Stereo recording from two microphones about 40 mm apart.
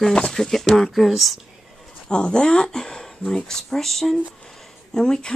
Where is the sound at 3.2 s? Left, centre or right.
Left.